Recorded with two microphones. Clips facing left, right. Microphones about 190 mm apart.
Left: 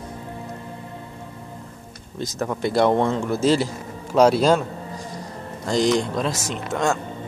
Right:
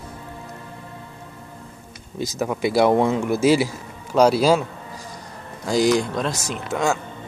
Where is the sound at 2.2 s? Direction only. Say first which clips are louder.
Right 2 dB; 5° right (ahead or behind).